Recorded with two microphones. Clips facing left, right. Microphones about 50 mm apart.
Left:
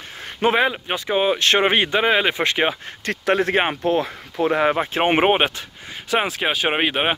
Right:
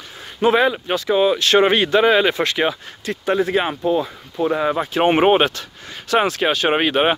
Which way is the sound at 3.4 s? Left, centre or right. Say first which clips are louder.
Right 1 dB; left.